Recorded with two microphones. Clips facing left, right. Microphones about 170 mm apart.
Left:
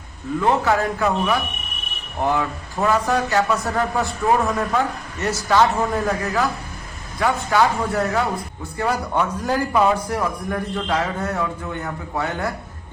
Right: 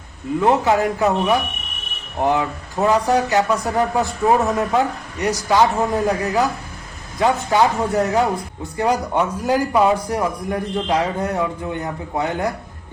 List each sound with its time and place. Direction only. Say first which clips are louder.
0.3 s a man's voice: right 3 dB; 20° right (ahead or behind)